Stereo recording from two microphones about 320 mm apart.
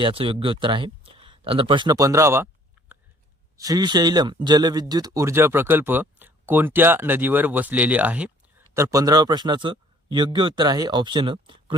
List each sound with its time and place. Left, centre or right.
0.0 s speech: centre
3.6 s speech: centre